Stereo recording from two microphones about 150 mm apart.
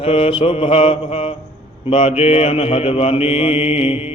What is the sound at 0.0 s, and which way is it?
Mantra, 40° left (ahead or behind).